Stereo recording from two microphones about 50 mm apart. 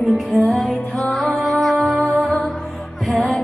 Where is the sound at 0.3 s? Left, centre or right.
Centre.